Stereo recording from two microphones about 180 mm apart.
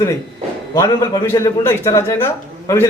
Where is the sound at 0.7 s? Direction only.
20° left (ahead or behind).